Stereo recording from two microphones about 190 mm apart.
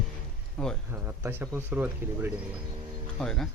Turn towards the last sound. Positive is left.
turn(degrees=5)  # may be behind; listen again after turning